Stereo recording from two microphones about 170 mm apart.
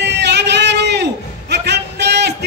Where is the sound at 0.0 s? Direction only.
90° right.